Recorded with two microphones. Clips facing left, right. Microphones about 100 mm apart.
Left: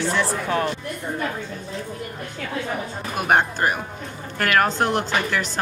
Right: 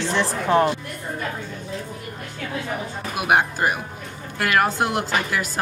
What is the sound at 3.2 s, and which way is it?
A woman's voice, 10° right (ahead or behind).